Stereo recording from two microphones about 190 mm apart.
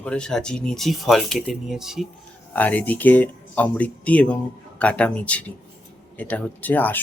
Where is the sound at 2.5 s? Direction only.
10° left (ahead or behind).